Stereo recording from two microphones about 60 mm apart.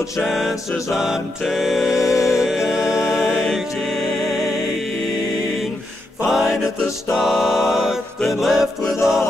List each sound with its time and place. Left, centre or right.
0.2 s music: centre
0.9 s a capella: centre
1.4 s music: centre
2.0 s music: left
2.2 s music: centre
6.3 s music: centre